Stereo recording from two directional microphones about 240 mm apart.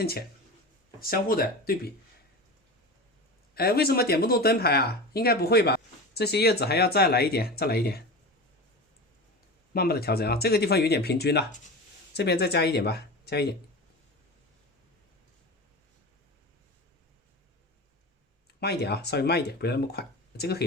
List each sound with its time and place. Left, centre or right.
0.0 s speech: left
3.5 s speech: left
9.7 s speech: left
18.6 s speech: left